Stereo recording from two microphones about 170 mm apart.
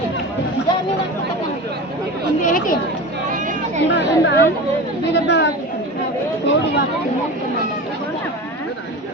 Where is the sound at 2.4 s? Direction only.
50° left (ahead or behind).